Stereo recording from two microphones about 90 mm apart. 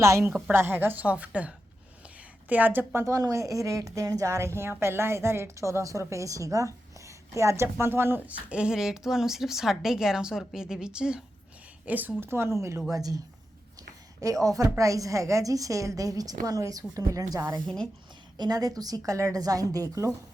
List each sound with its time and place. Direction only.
0.0 s a woman's voice: 35° right (ahead or behind)
3.0 s a woman's voice: 40° right (ahead or behind)
12.9 s a woman's voice: 45° right (ahead or behind)